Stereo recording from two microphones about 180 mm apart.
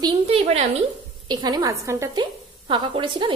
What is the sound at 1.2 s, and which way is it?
A woman's voice, 20° right (ahead or behind).